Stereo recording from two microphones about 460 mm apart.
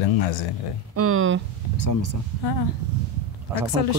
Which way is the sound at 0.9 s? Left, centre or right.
Right.